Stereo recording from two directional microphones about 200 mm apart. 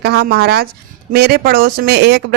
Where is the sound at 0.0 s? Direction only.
55° right (ahead or behind).